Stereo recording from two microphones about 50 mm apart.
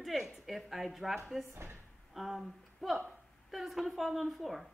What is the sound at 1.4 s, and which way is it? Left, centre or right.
Speech, right.